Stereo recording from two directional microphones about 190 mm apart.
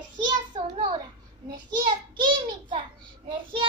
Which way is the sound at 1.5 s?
25° right (ahead or behind).